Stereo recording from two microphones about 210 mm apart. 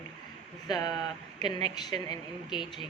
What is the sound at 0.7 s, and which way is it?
Speech, 20° left (ahead or behind).